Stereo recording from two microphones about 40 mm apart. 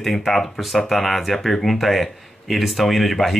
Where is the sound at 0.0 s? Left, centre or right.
Centre.